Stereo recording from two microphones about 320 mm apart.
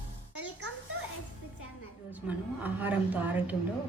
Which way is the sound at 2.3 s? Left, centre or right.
Centre.